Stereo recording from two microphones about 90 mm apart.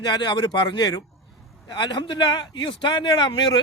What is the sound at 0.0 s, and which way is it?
A man's voice, 50° left (ahead or behind).